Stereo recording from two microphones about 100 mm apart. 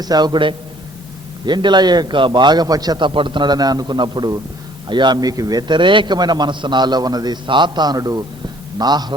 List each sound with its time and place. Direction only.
0.0 s a man's voice: 45° right (ahead or behind)
3.1 s a man's voice: 55° right (ahead or behind); by 7.3 s 40° right (ahead or behind)
7.4 s a man's voice: 50° right (ahead or behind)